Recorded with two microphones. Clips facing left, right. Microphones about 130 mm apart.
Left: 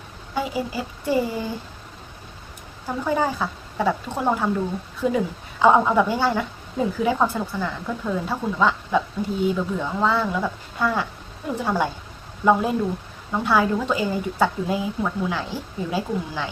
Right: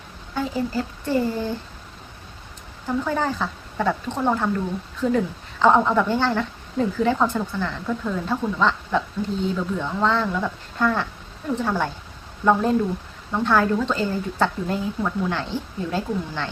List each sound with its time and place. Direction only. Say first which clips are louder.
0.3 s speech: right 1 dB; 10° left (ahead or behind)
2.8 s speech: left 1 dB; 10° left (ahead or behind)
13.3 s speech: right 1 dB; 10° left (ahead or behind)